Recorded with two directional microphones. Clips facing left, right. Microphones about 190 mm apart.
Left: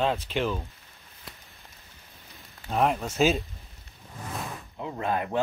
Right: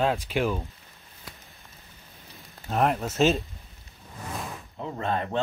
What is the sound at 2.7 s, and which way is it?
Speech, centre (ahead or behind).